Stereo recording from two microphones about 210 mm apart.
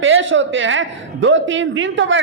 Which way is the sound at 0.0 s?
65° right (ahead or behind).